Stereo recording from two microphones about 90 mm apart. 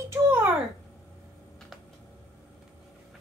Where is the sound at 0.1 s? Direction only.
25° right (ahead or behind).